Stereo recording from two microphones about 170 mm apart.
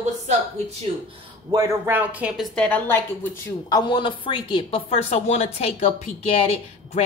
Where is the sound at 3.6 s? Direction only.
25° left (ahead or behind).